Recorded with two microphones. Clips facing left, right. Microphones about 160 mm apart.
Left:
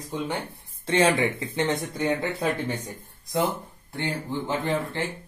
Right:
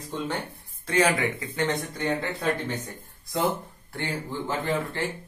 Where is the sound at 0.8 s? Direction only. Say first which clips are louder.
Left 2 dB; 25° left (ahead or behind).